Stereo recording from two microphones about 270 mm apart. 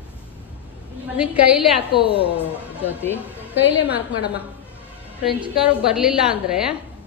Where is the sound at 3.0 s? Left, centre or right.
Centre.